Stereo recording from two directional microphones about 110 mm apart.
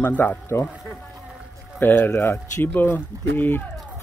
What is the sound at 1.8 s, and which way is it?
Speech, 20° left (ahead or behind).